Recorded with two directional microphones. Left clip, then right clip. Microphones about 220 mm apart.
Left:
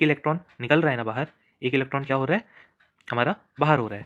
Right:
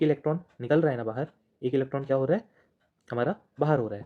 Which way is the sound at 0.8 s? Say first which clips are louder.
Left 3 dB; 20° left (ahead or behind).